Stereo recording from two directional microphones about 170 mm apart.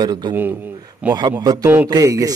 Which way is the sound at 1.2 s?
25° right (ahead or behind).